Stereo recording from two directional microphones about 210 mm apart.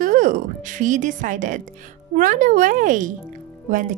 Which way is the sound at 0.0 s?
40° right (ahead or behind).